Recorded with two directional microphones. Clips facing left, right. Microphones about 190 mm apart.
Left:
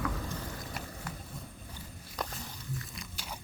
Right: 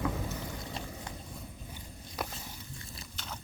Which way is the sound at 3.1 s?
10° left (ahead or behind).